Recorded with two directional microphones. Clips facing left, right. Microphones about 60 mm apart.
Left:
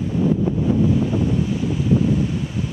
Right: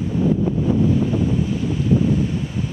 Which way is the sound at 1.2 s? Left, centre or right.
Centre.